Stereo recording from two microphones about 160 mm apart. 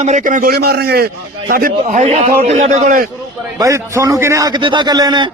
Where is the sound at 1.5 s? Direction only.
60° right (ahead or behind).